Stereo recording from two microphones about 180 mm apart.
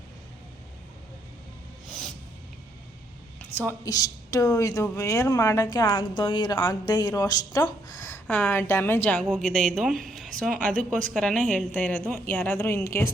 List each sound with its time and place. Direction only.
1.9 s a sound: 5° left (ahead or behind)
3.5 s a woman's voice: 10° left (ahead or behind)
3.8 s a woman's voice: 20° left (ahead or behind)
8.3 s a woman's voice: 5° left (ahead or behind)